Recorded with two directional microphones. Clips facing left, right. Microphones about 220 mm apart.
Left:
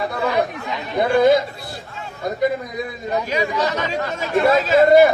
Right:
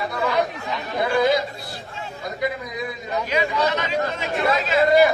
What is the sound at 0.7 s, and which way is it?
Speech, 20° left (ahead or behind).